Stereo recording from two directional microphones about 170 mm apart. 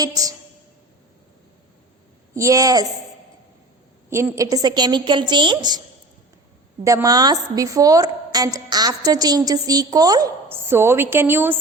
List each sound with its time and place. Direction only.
0.0 s a woman's voice: 20° right (ahead or behind)
2.3 s a woman's voice: 20° right (ahead or behind)
4.1 s a woman's voice: 15° right (ahead or behind)
6.8 s a woman's voice: 20° right (ahead or behind)